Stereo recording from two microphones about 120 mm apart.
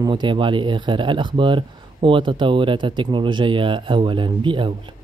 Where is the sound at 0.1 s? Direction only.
45° right (ahead or behind).